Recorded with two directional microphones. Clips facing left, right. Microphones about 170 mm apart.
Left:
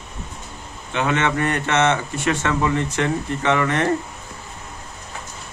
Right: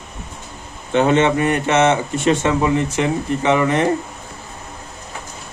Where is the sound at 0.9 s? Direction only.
25° right (ahead or behind).